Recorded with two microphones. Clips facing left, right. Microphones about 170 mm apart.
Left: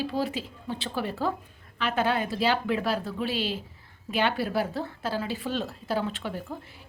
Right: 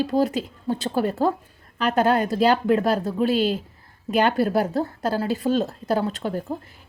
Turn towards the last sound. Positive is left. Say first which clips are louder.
# right 6 dB
turn(degrees=-45)  # may be behind; listen again after turning